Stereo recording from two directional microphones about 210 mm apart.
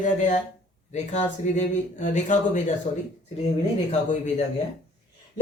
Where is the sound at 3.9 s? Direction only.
35° left (ahead or behind).